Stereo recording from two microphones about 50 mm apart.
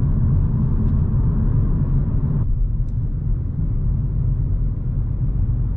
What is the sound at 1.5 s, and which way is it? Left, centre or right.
Vehicle, centre.